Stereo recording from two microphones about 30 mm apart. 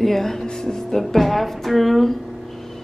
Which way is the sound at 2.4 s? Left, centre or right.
Centre.